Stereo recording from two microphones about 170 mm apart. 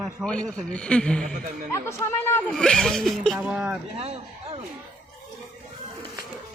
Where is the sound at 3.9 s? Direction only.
35° right (ahead or behind).